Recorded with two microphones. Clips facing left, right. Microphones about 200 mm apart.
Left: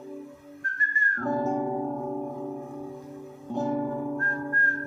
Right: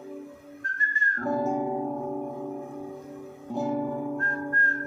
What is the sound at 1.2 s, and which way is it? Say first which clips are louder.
Music: even; 10° right (ahead or behind).